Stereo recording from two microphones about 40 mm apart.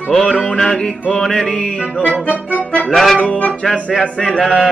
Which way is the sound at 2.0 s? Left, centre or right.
Left.